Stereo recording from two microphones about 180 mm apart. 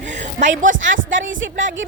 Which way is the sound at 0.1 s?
40° right (ahead or behind).